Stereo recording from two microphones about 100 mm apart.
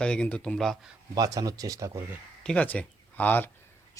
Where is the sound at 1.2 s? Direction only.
35° right (ahead or behind).